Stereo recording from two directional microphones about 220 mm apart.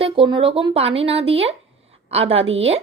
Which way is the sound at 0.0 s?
25° right (ahead or behind).